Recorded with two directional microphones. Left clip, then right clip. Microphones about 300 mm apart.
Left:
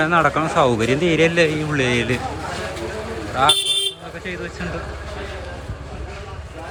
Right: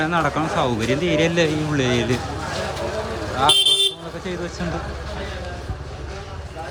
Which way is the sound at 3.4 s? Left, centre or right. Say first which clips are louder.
Left 1 dB; centre.